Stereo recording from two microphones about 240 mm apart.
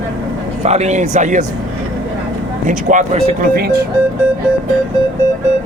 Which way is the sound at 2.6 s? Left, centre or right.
Right.